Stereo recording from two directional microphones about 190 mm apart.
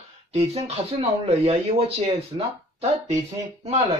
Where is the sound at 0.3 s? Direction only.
35° right (ahead or behind).